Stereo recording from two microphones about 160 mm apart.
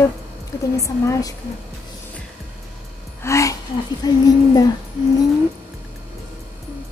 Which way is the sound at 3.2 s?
20° left (ahead or behind).